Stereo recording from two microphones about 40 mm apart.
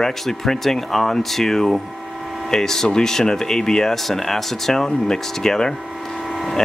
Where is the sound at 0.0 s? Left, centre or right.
Centre.